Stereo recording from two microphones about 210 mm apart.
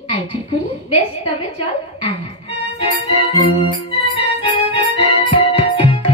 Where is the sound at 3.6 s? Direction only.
25° left (ahead or behind).